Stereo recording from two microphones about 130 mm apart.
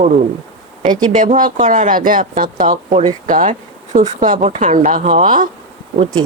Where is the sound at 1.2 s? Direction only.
90° right.